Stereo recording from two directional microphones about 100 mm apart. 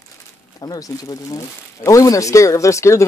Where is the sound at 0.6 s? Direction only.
40° left (ahead or behind).